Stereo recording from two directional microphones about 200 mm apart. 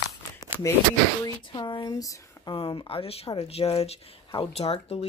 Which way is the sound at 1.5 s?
20° left (ahead or behind).